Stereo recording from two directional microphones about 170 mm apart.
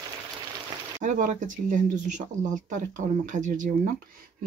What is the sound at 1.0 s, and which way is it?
Speech, 50° right (ahead or behind).